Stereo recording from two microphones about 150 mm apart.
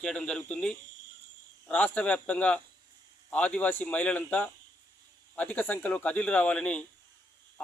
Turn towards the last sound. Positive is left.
turn(degrees=10)  # may be behind; listen again after turning